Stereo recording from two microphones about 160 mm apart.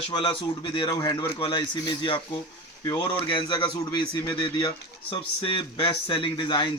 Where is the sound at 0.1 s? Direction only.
30° left (ahead or behind).